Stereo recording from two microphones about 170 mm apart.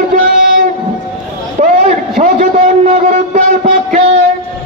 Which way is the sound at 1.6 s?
45° right (ahead or behind).